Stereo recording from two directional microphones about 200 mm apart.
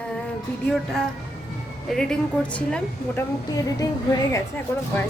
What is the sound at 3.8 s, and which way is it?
Speech, 20° left (ahead or behind).